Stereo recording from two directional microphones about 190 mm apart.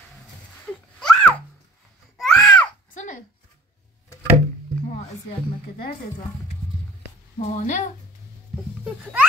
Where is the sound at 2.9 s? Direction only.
40° left (ahead or behind).